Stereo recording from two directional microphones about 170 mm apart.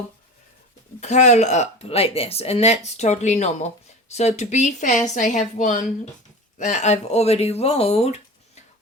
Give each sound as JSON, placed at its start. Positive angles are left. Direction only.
{"t": 1.0, "sound": "a woman's voice", "side_deg": 40}